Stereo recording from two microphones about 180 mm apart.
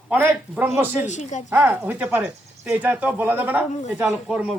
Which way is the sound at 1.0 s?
40° left (ahead or behind).